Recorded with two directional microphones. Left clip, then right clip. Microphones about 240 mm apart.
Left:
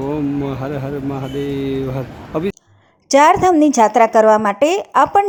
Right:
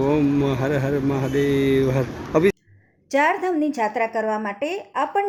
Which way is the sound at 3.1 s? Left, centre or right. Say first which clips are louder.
Left 9 dB; left.